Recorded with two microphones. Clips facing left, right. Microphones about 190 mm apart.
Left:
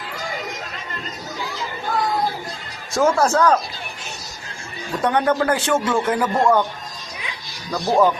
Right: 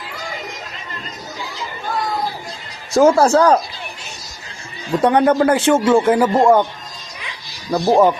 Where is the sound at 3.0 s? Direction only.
30° right (ahead or behind).